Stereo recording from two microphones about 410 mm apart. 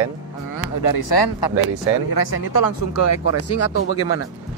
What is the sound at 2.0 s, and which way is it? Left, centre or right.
Speech, left.